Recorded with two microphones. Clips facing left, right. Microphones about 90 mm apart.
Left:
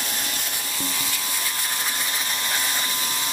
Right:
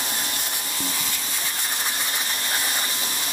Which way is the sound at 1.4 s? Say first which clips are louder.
Right 1 dB; 10° right (ahead or behind).